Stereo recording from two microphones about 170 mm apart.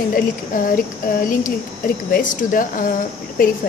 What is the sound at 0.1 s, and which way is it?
A woman's voice, 55° left (ahead or behind).